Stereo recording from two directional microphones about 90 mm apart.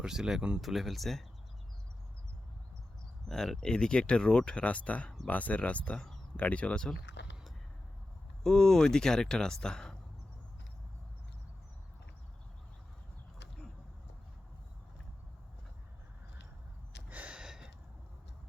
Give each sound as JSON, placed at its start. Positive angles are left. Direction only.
{"t": 0.0, "sound": "speech", "side_deg": -5}
{"t": 3.2, "sound": "speech", "side_deg": 5}
{"t": 8.4, "sound": "speech", "side_deg": 5}
{"t": 17.1, "sound": "gasp", "side_deg": -15}